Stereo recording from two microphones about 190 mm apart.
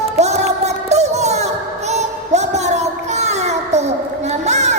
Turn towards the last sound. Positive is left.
turn(degrees=-35)  # may be behind; listen again after turning